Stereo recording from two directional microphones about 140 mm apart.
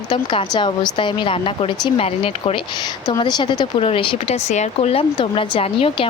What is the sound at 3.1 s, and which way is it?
Speech, 30° left (ahead or behind).